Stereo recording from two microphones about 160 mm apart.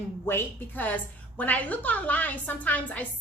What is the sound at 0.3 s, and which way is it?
A woman's voice, 15° left (ahead or behind).